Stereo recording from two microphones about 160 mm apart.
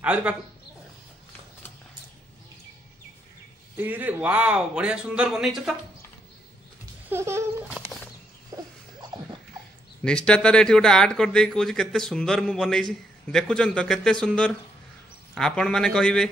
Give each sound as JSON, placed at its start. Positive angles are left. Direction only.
{"t": 0.0, "sound": "speech", "side_deg": -10}
{"t": 3.7, "sound": "speech", "side_deg": -10}
{"t": 7.1, "sound": "speech", "side_deg": -15}
{"t": 8.5, "sound": "a sound", "side_deg": -20}
{"t": 10.0, "sound": "speech", "side_deg": 5}